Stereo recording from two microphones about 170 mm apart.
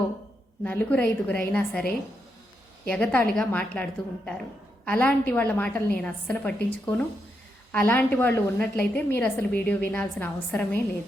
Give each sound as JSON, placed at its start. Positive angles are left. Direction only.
{"t": 0.6, "sound": "a woman's voice", "side_deg": 10}
{"t": 2.9, "sound": "a woman's voice", "side_deg": 10}